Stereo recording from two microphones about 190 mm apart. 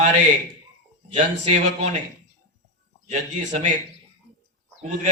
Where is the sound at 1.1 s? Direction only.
35° right (ahead or behind).